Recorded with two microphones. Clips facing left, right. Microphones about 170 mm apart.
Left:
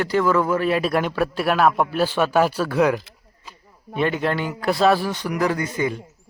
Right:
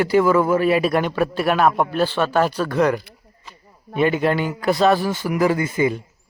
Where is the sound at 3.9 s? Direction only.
5° right (ahead or behind).